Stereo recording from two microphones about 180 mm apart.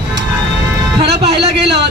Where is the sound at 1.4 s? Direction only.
65° right (ahead or behind).